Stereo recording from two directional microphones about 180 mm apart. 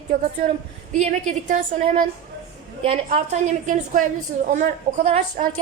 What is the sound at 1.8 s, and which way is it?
Speech, 45° right (ahead or behind).